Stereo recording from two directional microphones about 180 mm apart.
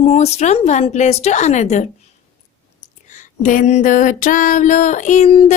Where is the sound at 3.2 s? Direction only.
45° left (ahead or behind).